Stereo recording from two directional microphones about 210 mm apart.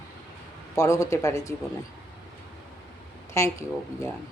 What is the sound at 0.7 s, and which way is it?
Speech, 15° left (ahead or behind).